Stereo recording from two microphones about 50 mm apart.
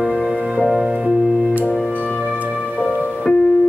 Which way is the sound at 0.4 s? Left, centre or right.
Centre.